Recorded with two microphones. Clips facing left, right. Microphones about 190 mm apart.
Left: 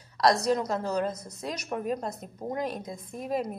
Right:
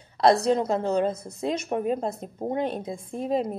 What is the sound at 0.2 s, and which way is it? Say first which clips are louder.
A woman's voice: right 4 dB; 25° right (ahead or behind).